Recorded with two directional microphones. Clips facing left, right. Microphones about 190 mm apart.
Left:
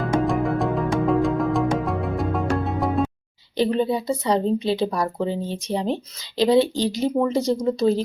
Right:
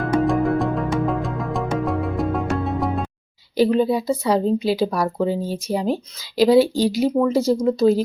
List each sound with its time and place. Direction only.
0.0 s music: centre (ahead or behind)
3.6 s a woman's voice: 5° right (ahead or behind)